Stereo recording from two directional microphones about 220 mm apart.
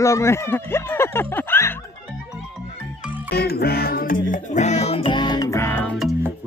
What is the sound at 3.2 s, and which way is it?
Music, 45° left (ahead or behind).